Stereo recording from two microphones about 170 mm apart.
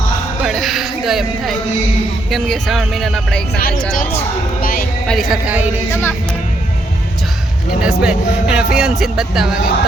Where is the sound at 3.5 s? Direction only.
60° left (ahead or behind).